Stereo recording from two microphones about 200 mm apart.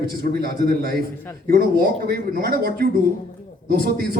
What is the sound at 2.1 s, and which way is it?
A man's voice, 50° right (ahead or behind).